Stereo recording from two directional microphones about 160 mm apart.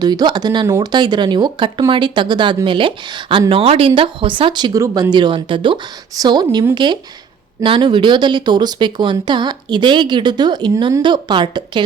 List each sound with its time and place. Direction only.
0.0 s speech: 25° right (ahead or behind)